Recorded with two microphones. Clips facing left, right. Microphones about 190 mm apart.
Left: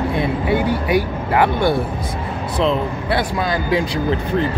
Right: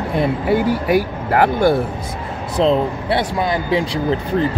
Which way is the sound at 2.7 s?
25° right (ahead or behind).